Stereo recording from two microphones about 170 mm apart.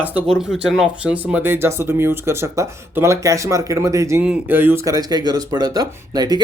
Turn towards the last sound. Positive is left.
turn(degrees=-25)  # may be behind; listen again after turning